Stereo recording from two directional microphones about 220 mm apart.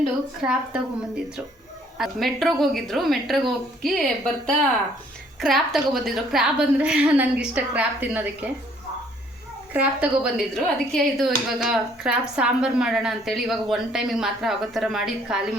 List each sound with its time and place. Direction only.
0.4 s a woman's voice: 5° right (ahead or behind)
9.7 s a woman's voice: 5° right (ahead or behind)